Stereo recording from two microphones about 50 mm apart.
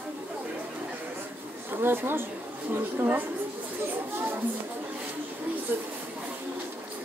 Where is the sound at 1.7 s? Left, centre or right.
Right.